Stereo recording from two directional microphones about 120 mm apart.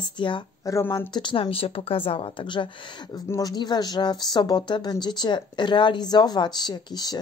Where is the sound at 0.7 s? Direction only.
25° left (ahead or behind).